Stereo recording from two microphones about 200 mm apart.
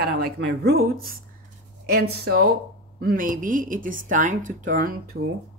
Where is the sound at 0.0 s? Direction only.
55° right (ahead or behind).